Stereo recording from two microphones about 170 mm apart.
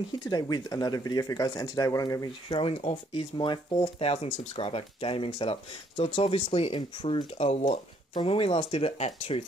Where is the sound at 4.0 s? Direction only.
35° left (ahead or behind).